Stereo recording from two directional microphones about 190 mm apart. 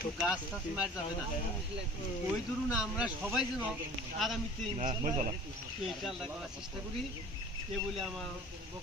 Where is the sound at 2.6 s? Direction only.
5° right (ahead or behind).